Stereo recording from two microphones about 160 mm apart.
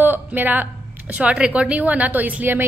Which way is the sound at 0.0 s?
10° right (ahead or behind).